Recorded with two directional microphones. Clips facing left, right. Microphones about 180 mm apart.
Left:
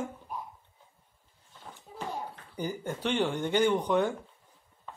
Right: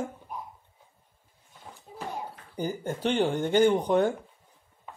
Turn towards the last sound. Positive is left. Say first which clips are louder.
# right 4 dB
turn(degrees=-40)  # may be behind; listen again after turning